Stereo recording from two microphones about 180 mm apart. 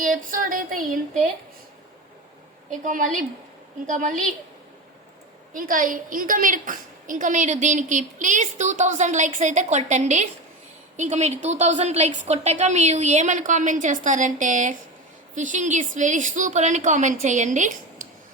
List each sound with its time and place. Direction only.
0.0 s a woman's voice: 50° right (ahead or behind)
2.6 s a woman's voice: 45° right (ahead or behind)
5.5 s a woman's voice: 50° right (ahead or behind)